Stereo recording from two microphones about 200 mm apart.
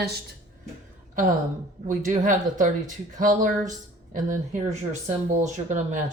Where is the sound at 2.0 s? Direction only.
40° right (ahead or behind).